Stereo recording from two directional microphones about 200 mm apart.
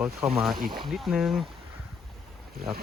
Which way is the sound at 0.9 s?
Centre (ahead or behind).